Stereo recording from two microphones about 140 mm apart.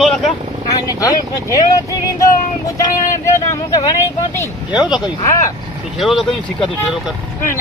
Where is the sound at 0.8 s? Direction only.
25° left (ahead or behind).